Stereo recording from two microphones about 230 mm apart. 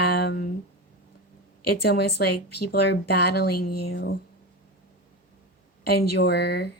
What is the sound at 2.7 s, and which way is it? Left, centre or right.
A woman's voice, left.